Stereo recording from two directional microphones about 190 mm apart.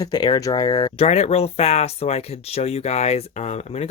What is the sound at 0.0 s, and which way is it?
Speech, 20° left (ahead or behind).